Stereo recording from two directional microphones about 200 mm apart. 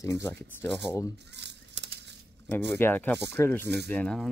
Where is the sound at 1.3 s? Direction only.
60° right (ahead or behind).